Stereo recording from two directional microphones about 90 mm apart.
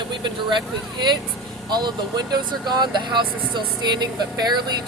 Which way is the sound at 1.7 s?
50° right (ahead or behind).